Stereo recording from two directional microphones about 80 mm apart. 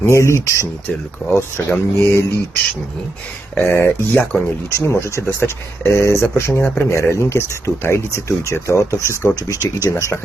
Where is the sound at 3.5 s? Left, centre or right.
Left.